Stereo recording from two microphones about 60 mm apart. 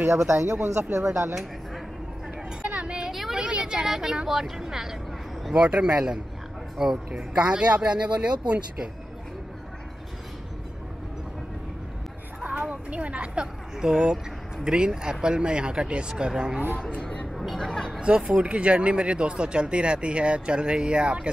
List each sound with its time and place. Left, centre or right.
0.3 s speech: right
1.0 s speech: right
2.6 s a sound: centre
5.5 s speech: centre
12.4 s a woman's voice: right
16.7 s a sound: centre
17.5 s speech: centre
18.0 s speech: centre